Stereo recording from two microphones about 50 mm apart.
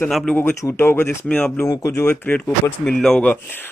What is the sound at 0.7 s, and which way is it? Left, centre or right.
Speech, left.